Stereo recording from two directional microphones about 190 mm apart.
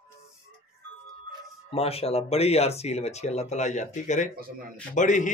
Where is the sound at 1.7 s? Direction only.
30° left (ahead or behind).